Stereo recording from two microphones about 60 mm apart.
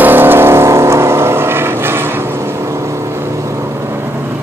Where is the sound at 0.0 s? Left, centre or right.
Right.